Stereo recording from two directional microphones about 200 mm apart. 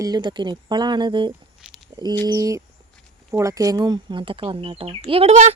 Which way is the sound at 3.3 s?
15° right (ahead or behind).